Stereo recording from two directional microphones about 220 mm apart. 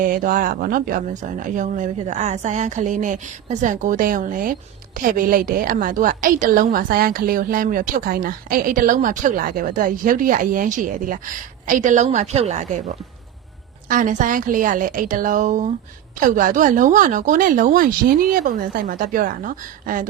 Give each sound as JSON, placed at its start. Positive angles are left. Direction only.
{"t": 0.0, "sound": "a woman's voice", "side_deg": -40}
{"t": 13.9, "sound": "a woman's voice", "side_deg": -35}